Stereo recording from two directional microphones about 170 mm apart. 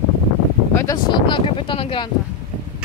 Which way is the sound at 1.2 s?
30° left (ahead or behind).